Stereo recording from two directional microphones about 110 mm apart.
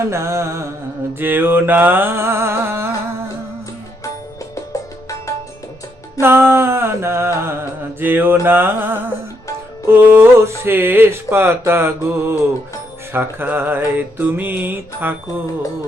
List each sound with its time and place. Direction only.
0.1 s speech: 25° right (ahead or behind)
4.5 s music: 30° left (ahead or behind)
6.1 s mantra: 20° right (ahead or behind)
7.3 s music: 20° right (ahead or behind)
9.8 s speech: 20° right (ahead or behind)